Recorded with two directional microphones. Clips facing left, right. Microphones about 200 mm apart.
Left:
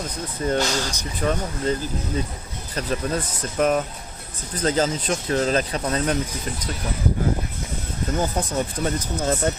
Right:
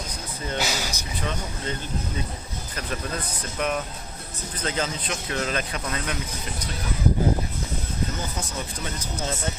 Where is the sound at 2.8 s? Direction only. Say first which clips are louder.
Left 7 dB; 35° left (ahead or behind).